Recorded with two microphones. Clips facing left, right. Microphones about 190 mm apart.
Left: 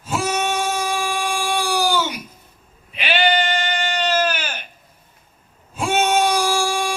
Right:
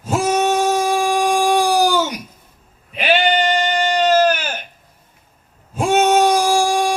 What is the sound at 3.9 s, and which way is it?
Sheep, 40° right (ahead or behind).